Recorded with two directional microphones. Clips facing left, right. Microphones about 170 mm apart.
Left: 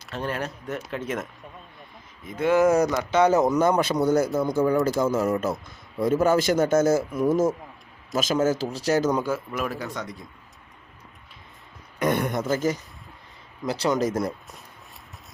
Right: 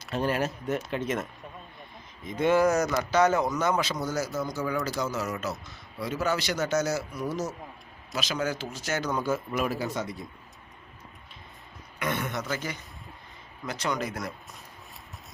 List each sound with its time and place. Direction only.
0.1 s speech: 10° right (ahead or behind)
2.2 s speech: 5° left (ahead or behind)
2.6 s speech: 25° left (ahead or behind)
3.5 s speech: 55° left (ahead or behind)
4.7 s a man's voice: 45° left (ahead or behind)
9.0 s speech: 15° left (ahead or behind)
9.5 s speech: 5° right (ahead or behind)
11.9 s a man's voice: 45° left (ahead or behind)
13.7 s a man's voice: 30° left (ahead or behind)
13.9 s a man's voice: 45° left (ahead or behind)